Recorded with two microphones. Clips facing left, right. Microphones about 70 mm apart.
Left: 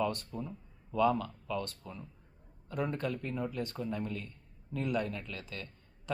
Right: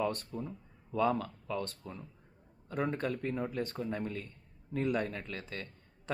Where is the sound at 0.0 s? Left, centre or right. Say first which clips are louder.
Even; right.